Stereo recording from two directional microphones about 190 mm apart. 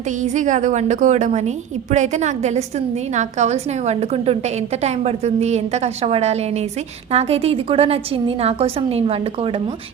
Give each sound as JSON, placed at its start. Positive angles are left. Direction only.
{"t": 0.2, "sound": "a woman's voice", "side_deg": -40}